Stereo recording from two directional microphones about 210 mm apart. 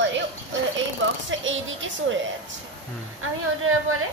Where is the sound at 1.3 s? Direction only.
65° right (ahead or behind).